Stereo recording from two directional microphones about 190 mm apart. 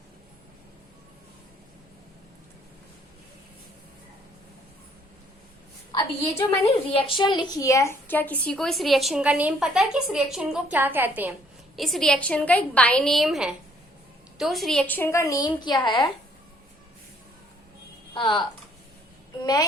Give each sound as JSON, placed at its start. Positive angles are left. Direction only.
{"t": 6.7, "sound": "a woman's voice", "side_deg": 25}
{"t": 11.8, "sound": "a woman's voice", "side_deg": 0}
{"t": 18.1, "sound": "speech", "side_deg": 25}